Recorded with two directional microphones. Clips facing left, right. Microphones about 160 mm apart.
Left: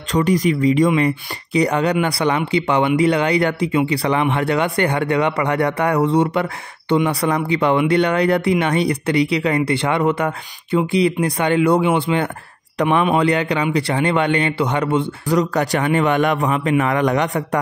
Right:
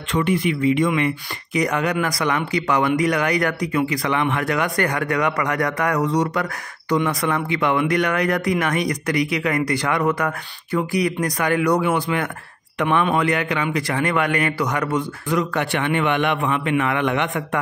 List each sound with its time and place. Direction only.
0.1 s a man's voice: 40° left (ahead or behind)